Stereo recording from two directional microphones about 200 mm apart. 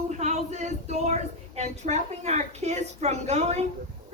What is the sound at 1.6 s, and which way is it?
Speech, 35° right (ahead or behind).